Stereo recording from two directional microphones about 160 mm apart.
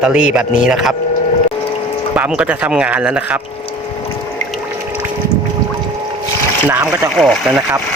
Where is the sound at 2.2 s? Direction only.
5° right (ahead or behind).